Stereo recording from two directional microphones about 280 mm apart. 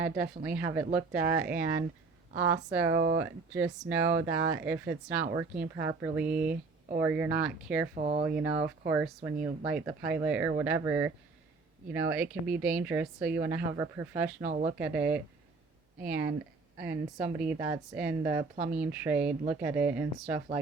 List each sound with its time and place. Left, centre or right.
0.0 s speech: centre
2.8 s speech: right
3.2 s speech: centre
6.4 s speech: right
7.0 s speech: centre
7.9 s speech: right
8.9 s speech: centre
14.4 s speech: right
14.8 s speech: centre
17.4 s speech: centre
18.5 s speech: right
18.8 s speech: centre